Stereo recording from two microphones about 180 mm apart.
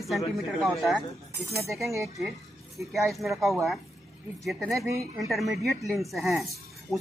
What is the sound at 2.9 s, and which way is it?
Speech, centre (ahead or behind).